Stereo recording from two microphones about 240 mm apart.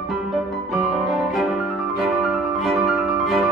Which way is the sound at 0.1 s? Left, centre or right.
Centre.